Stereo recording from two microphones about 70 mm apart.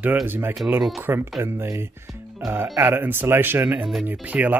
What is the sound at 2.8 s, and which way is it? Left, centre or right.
Speech, right.